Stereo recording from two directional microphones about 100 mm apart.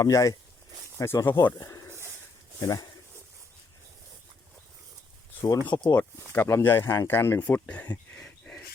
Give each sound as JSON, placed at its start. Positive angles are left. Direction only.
{"t": 0.0, "sound": "speech", "side_deg": 35}
{"t": 0.9, "sound": "speech", "side_deg": 25}
{"t": 5.6, "sound": "speech", "side_deg": 50}
{"t": 6.0, "sound": "speech", "side_deg": 20}